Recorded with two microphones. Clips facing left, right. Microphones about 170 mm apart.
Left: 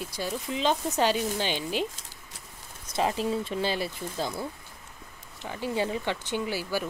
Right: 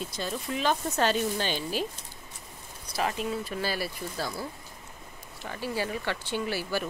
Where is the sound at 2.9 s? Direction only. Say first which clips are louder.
Left 3 dB; 25° left (ahead or behind).